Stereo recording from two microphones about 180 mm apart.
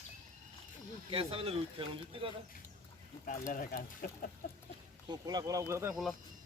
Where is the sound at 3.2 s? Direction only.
50° left (ahead or behind).